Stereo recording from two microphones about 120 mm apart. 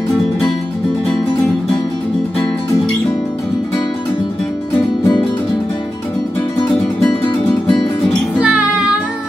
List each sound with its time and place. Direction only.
8.4 s music: 5° right (ahead or behind)